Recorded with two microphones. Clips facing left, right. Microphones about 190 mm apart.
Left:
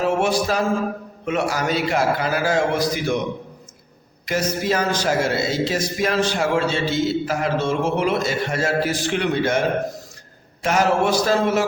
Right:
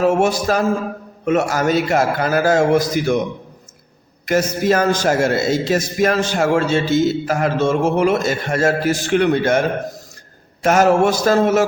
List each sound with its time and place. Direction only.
0.0 s a man's voice: 45° right (ahead or behind)
4.3 s a man's voice: 50° right (ahead or behind)